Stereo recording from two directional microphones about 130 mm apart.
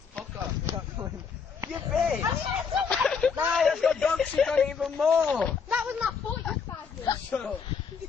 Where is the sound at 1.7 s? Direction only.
5° right (ahead or behind).